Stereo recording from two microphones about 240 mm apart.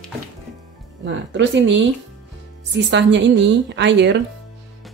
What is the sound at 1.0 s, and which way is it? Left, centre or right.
Speech, right.